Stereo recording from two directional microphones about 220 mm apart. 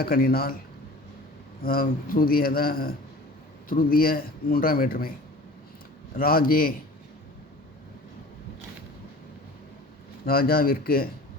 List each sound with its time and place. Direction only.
0.0 s speech: 45° left (ahead or behind)
1.6 s a man's voice: 40° left (ahead or behind)
6.1 s a man's voice: 40° left (ahead or behind)
10.2 s speech: 45° left (ahead or behind)